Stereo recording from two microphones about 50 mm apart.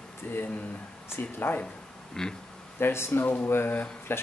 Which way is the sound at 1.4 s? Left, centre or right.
Left.